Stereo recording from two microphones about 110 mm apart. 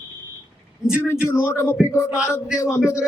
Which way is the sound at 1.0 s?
25° left (ahead or behind).